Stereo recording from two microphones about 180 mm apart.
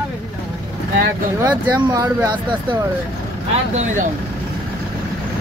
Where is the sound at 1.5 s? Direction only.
20° right (ahead or behind).